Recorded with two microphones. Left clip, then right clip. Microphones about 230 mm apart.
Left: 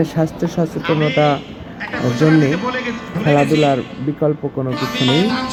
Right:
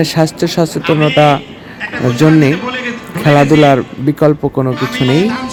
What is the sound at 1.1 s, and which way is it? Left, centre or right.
Speech, right.